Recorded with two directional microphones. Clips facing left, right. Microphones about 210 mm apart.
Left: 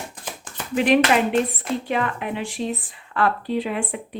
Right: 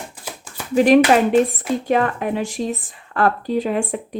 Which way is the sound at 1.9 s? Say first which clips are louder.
Right 8 dB; 40° right (ahead or behind).